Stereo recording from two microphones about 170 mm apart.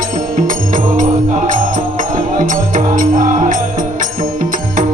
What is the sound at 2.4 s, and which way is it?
Music, 50° right (ahead or behind).